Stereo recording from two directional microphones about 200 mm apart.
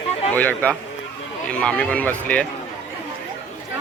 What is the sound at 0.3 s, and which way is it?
Speech, 5° left (ahead or behind).